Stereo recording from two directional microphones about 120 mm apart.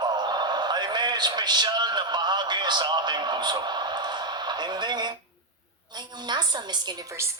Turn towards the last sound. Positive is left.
turn(degrees=-35)  # may be behind; listen again after turning